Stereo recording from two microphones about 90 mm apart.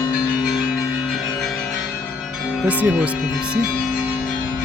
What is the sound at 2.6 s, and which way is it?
Speech, 15° right (ahead or behind).